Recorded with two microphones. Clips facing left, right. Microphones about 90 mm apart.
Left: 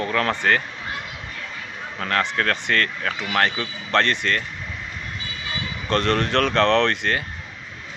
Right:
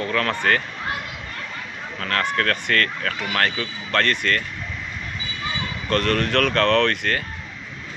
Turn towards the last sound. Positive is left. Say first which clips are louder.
# even
turn(degrees=25)  # may be behind; listen again after turning